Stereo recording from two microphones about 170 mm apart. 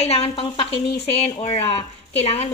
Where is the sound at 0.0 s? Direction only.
35° left (ahead or behind).